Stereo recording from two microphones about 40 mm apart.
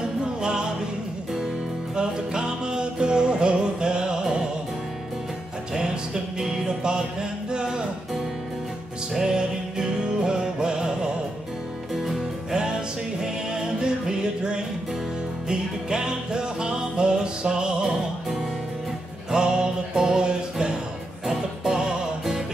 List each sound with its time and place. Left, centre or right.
0.4 s music: right
2.0 s music: centre
6.4 s music: centre
9.1 s music: centre
11.9 s music: centre
13.2 s music: centre
19.3 s music: centre